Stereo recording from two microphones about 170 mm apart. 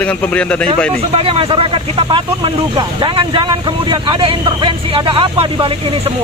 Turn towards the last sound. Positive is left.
turn(degrees=-30)  # may be behind; listen again after turning